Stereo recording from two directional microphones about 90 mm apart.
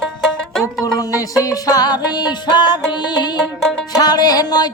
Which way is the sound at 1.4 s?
45° left (ahead or behind).